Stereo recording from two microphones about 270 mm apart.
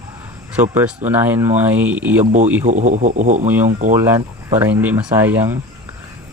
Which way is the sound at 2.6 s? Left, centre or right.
Right.